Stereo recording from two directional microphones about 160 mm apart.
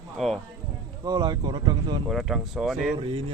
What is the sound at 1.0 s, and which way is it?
Speech, 25° right (ahead or behind).